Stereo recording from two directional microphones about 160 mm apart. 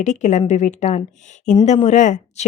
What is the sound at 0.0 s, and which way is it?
Speech, 50° left (ahead or behind).